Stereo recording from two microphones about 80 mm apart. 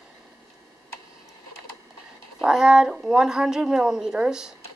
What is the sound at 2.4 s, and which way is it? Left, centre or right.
Speech, centre.